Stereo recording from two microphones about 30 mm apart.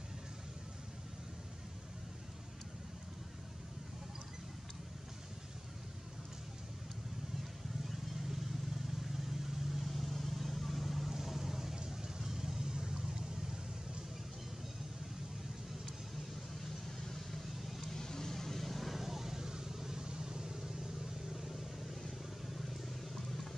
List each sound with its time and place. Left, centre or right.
9.1 s vehicle: centre
11.7 s vehicle: right
16.6 s vehicle: centre
17.6 s vehicle: centre
17.8 s vehicle: centre
18.9 s vehicle: centre
22.5 s a sound: centre